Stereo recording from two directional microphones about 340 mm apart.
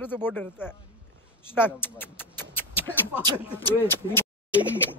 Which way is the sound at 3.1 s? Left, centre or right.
Centre.